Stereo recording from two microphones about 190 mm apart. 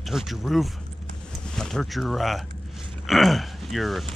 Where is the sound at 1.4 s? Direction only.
5° left (ahead or behind).